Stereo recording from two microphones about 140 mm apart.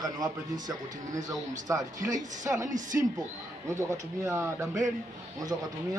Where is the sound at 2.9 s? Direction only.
15° right (ahead or behind).